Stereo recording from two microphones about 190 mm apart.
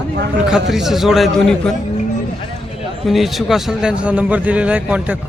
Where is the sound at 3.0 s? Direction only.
Centre (ahead or behind).